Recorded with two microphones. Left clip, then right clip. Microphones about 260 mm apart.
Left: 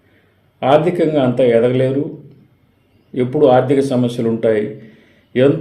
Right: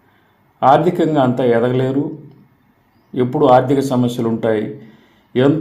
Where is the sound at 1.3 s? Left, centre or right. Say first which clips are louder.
Left 2 dB; right.